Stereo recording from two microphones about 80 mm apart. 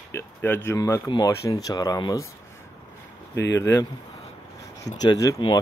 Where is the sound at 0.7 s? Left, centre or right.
Left.